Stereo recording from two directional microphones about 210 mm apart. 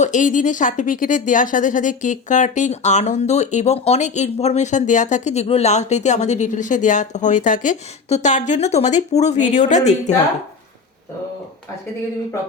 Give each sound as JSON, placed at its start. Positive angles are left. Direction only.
{"t": 0.0, "sound": "speech", "side_deg": 35}